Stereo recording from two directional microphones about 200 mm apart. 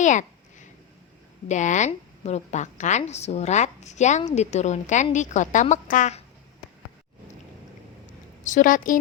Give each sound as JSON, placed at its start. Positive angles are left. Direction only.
{"t": 0.0, "sound": "a sound", "side_deg": 40}
{"t": 1.5, "sound": "a woman's voice", "side_deg": 35}
{"t": 8.4, "sound": "a woman's voice", "side_deg": 40}